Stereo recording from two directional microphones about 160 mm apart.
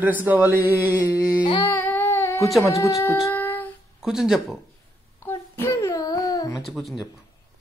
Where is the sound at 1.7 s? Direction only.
10° left (ahead or behind).